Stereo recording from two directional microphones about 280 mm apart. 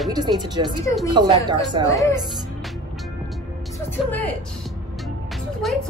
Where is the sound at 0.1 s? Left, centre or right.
Centre.